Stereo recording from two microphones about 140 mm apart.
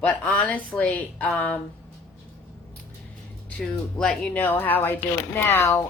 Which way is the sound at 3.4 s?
10° left (ahead or behind).